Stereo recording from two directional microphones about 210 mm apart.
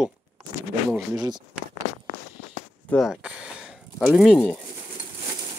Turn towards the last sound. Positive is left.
turn(degrees=0)  # may be behind; listen again after turning